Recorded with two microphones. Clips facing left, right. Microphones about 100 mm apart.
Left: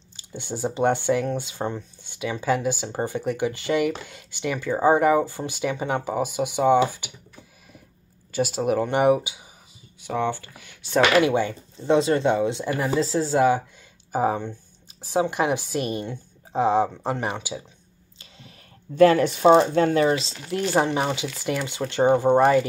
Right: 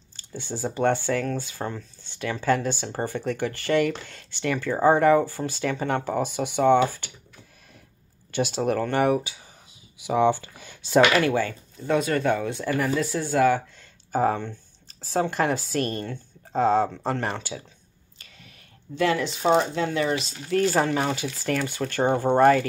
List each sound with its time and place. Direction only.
0.1 s speech: 15° left (ahead or behind)
8.3 s speech: 5° left (ahead or behind)
8.7 s speech: 15° left (ahead or behind)
9.9 s speech: 10° right (ahead or behind); by 10.8 s 25° right (ahead or behind)
11.0 s speech: 15° left (ahead or behind)
14.1 s speech: 10° left (ahead or behind)
18.9 s speech: 45° left (ahead or behind)
20.4 s speech: 20° left (ahead or behind)